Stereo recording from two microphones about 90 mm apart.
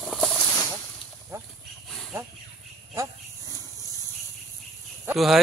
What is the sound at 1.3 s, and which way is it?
Livestock, 30° right (ahead or behind).